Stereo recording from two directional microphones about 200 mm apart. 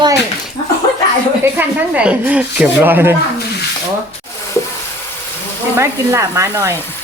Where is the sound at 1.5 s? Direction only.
5° right (ahead or behind).